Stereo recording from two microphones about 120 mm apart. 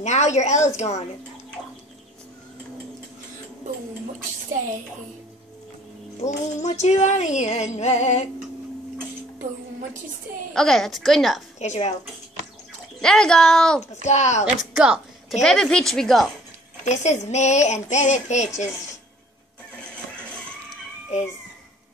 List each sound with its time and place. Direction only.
0.0 s female singing: 70° left (ahead or behind)
6.2 s female singing: 70° left (ahead or behind)
10.5 s a woman's voice: 5° left (ahead or behind)
11.6 s female singing: 70° left (ahead or behind)
13.0 s a woman's voice: 5° left (ahead or behind)
14.0 s female singing: 70° left (ahead or behind)
14.4 s a woman's voice: 5° right (ahead or behind)
16.8 s female singing: 75° left (ahead or behind)